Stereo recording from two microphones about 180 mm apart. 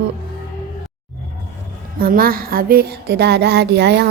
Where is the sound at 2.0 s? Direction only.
55° right (ahead or behind); by 4.0 s 70° right (ahead or behind).